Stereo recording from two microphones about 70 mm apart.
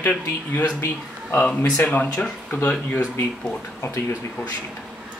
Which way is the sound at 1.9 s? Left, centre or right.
Left.